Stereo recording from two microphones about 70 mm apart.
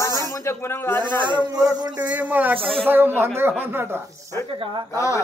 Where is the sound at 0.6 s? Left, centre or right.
Left.